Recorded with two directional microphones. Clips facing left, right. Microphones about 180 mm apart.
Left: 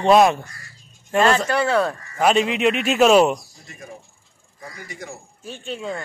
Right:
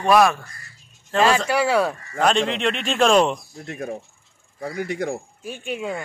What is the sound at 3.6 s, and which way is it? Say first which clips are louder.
Speech: right 10 dB; 60° right (ahead or behind).